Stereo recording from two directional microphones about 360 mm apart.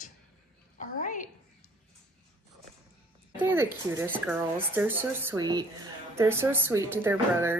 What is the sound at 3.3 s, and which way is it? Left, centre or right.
Speech, centre.